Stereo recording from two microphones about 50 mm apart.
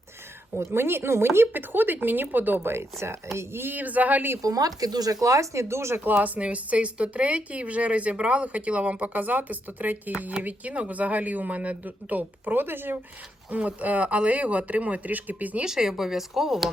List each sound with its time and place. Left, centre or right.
0.5 s speech: right
2.6 s speech: right
3.3 s speech: right
5.2 s speech: right
6.1 s speech: right
9.1 s speech: right
13.5 s speech: right
15.6 s speech: centre